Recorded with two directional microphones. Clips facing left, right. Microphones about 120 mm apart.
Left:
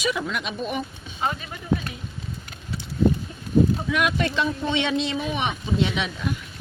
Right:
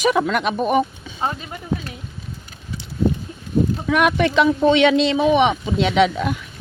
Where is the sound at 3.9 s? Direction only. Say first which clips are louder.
Right 6 dB; 60° right (ahead or behind).